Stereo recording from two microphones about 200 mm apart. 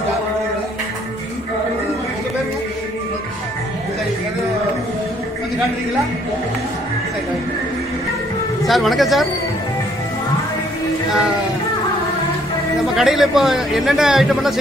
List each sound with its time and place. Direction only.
8.6 s a man's voice: centre (ahead or behind)
12.9 s a man's voice: centre (ahead or behind)